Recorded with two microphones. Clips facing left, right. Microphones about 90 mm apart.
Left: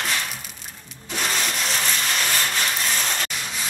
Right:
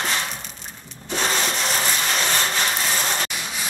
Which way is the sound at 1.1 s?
30° right (ahead or behind).